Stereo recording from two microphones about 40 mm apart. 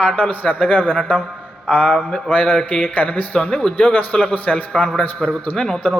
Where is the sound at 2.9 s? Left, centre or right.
Left; by 5.8 s centre.